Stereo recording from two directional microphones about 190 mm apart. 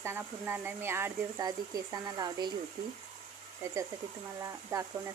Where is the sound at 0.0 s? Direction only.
10° right (ahead or behind).